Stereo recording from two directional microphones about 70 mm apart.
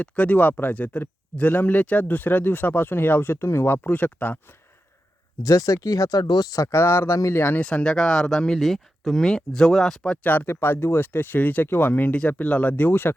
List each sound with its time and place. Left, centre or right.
0.0 s speech: left
5.4 s speech: left
7.6 s speech: centre
10.2 s speech: left